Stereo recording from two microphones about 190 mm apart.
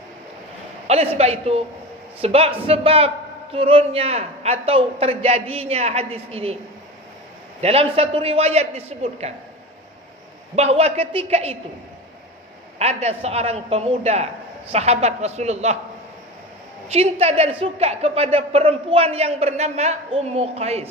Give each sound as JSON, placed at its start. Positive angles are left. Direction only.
{"t": 0.9, "sound": "speech", "side_deg": -35}
{"t": 7.6, "sound": "speech", "side_deg": -30}
{"t": 10.5, "sound": "speech", "side_deg": -35}
{"t": 12.8, "sound": "speech", "side_deg": -35}
{"t": 16.9, "sound": "speech", "side_deg": -35}